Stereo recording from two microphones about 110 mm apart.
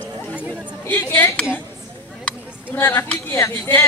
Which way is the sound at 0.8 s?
20° left (ahead or behind).